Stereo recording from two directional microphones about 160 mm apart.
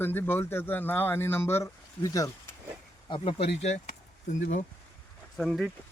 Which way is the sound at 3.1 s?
35° left (ahead or behind).